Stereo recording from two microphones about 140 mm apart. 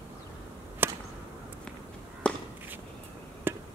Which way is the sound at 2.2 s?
5° left (ahead or behind).